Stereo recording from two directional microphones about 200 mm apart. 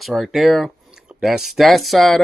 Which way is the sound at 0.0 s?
Centre (ahead or behind).